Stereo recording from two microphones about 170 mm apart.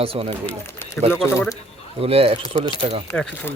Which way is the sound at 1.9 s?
35° right (ahead or behind).